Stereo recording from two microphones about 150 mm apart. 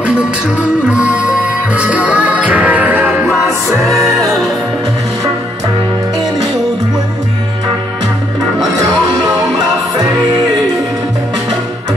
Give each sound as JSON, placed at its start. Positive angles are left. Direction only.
{"t": 0.0, "sound": "music", "side_deg": -5}
{"t": 3.9, "sound": "music", "side_deg": -20}
{"t": 4.3, "sound": "music", "side_deg": 0}